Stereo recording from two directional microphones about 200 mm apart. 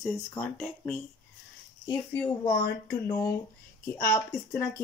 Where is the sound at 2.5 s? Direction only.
50° left (ahead or behind).